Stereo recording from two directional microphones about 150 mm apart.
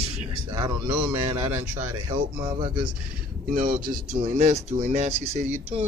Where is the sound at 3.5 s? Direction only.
70° right (ahead or behind).